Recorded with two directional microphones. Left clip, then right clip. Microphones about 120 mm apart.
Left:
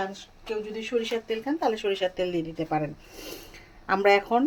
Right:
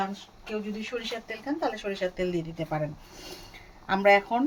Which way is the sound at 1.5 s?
75° left (ahead or behind).